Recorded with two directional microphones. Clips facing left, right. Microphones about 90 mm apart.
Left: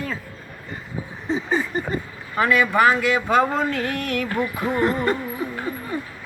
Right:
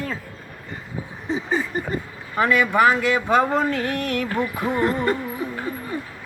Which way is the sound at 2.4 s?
25° right (ahead or behind).